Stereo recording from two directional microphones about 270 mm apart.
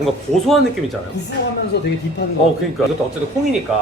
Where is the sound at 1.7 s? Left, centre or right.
Left.